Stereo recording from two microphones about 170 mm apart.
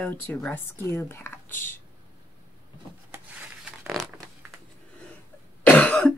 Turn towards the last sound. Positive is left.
turn(degrees=5)  # may be behind; listen again after turning